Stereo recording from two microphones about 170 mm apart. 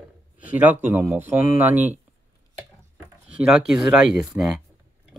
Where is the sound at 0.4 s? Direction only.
10° right (ahead or behind).